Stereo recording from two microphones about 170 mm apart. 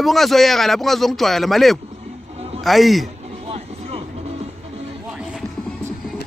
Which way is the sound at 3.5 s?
35° right (ahead or behind).